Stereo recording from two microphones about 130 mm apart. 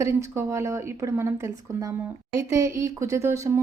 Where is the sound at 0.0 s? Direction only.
20° right (ahead or behind).